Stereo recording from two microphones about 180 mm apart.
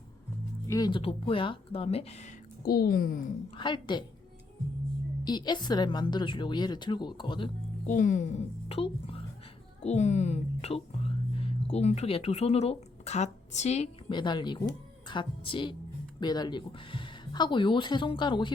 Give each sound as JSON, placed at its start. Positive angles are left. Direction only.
{"t": 0.7, "sound": "speech", "side_deg": 25}
{"t": 2.6, "sound": "a woman's voice", "side_deg": 55}
{"t": 3.5, "sound": "speech", "side_deg": 25}
{"t": 5.2, "sound": "speech", "side_deg": 25}
{"t": 7.9, "sound": "speech", "side_deg": 45}
{"t": 14.1, "sound": "speech", "side_deg": 25}